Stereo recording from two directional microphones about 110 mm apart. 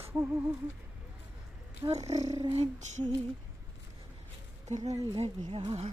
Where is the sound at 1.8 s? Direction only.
45° right (ahead or behind).